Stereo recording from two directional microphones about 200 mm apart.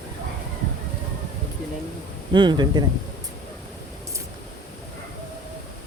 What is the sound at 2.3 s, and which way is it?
Speech, 20° right (ahead or behind).